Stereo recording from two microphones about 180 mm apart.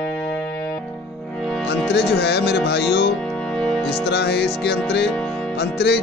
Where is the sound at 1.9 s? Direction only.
70° left (ahead or behind).